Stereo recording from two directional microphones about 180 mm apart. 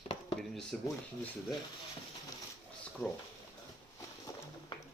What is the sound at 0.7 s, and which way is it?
Speech, 5° left (ahead or behind).